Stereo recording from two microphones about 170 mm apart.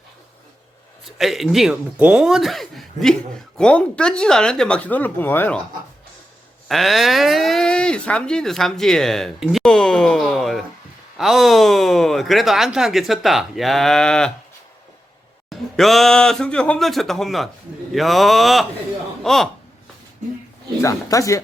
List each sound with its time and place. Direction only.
1.0 s speech: centre (ahead or behind)
6.7 s speech: centre (ahead or behind)
15.4 s speech: centre (ahead or behind)
20.8 s speech: 20° left (ahead or behind)